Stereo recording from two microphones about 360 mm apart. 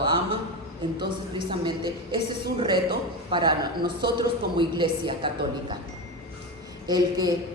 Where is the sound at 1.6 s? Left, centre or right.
Centre.